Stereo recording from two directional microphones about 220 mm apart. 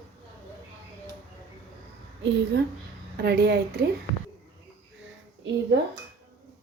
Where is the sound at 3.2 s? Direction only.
50° right (ahead or behind).